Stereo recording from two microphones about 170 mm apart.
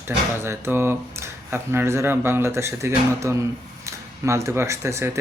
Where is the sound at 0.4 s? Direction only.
10° right (ahead or behind).